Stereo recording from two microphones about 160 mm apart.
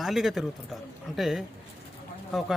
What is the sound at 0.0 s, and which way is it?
A man's voice, centre (ahead or behind).